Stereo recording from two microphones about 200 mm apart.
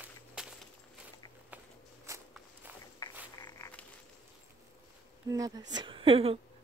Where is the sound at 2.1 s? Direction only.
15° right (ahead or behind).